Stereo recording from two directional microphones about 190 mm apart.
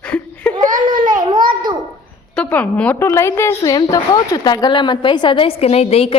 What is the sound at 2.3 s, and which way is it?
A woman's voice, 5° left (ahead or behind).